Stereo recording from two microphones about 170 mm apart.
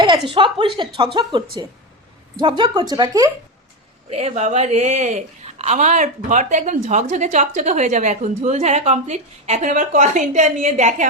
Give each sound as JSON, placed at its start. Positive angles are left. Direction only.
{"t": 0.3, "sound": "speech", "side_deg": -30}
{"t": 4.1, "sound": "speech", "side_deg": -40}